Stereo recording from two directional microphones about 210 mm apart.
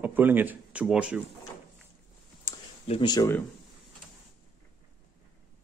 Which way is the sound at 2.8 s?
25° left (ahead or behind).